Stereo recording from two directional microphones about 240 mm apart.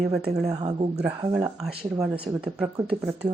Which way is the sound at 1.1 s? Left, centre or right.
Centre.